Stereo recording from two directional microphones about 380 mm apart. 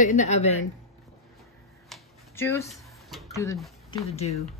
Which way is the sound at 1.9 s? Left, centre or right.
Centre.